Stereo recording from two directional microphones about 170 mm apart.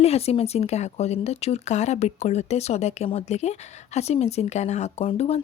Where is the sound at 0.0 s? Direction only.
35° left (ahead or behind).